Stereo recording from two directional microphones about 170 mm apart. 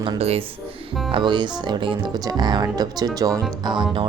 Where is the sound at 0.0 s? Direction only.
35° right (ahead or behind).